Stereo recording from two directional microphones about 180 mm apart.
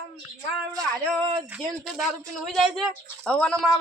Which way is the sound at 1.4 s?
5° right (ahead or behind).